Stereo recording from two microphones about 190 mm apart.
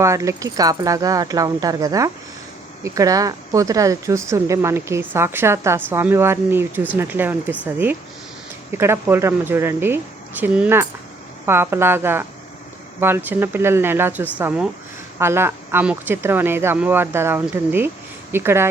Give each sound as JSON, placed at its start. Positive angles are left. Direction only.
{"t": 0.0, "sound": "speech", "side_deg": -15}